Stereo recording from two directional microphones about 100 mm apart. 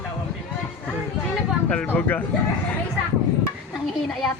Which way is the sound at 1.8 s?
20° left (ahead or behind).